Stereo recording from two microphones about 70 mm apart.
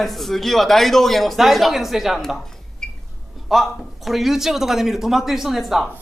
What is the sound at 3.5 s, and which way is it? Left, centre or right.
Speech, centre.